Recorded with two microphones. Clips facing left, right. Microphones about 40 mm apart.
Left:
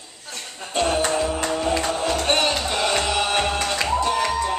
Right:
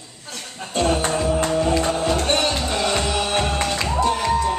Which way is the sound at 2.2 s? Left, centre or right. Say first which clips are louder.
Even; centre.